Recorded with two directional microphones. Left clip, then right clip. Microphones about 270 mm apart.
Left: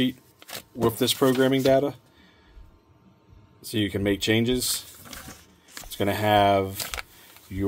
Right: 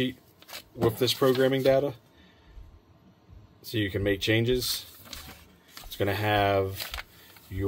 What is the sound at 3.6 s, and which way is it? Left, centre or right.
Speech, left.